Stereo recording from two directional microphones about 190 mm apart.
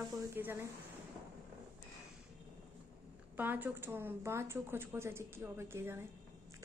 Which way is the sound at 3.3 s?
10° right (ahead or behind).